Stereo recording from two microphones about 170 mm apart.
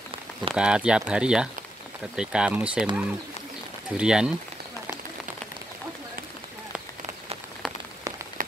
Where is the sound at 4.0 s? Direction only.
5° right (ahead or behind).